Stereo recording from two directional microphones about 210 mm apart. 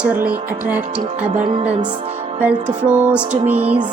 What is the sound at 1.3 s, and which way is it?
Music, 35° right (ahead or behind).